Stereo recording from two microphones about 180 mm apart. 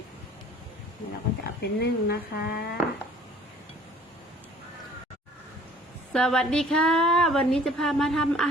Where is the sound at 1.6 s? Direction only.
65° left (ahead or behind).